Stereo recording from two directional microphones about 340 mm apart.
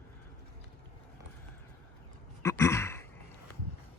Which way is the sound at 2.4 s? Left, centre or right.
Centre.